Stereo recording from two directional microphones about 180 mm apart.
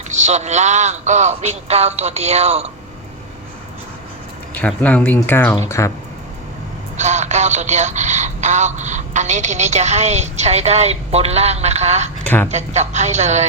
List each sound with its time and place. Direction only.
0.3 s speech: 40° right (ahead or behind)
4.5 s speech: 10° left (ahead or behind)
6.9 s speech: 40° right (ahead or behind)